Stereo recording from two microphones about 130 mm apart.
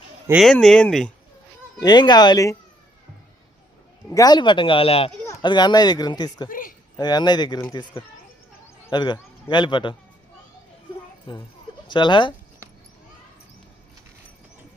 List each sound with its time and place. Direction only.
0.3 s speech: centre (ahead or behind)
1.8 s speech: 35° left (ahead or behind)
4.1 s speech: 30° left (ahead or behind); by 5.1 s 45° left (ahead or behind)
5.4 s speech: 35° left (ahead or behind)
6.5 s speech: 90° left
6.9 s speech: 30° left (ahead or behind)
11.3 s speech: 40° left (ahead or behind)